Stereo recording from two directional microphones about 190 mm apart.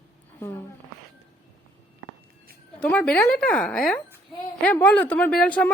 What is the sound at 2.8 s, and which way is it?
A woman's voice, 5° left (ahead or behind).